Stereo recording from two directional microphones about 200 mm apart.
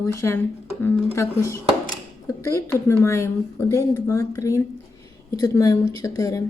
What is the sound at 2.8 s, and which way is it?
Speech, 15° left (ahead or behind).